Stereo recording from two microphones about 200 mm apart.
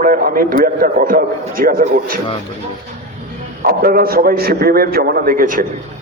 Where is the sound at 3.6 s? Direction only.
45° right (ahead or behind).